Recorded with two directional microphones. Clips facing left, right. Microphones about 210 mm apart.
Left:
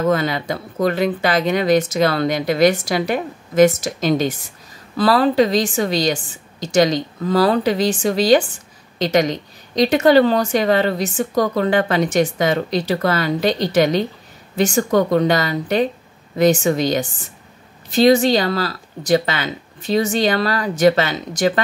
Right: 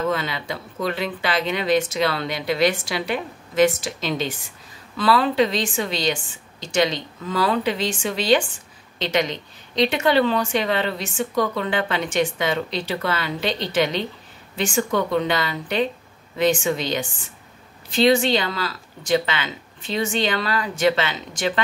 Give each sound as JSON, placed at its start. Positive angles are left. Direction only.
{"t": 0.0, "sound": "a woman's voice", "side_deg": 45}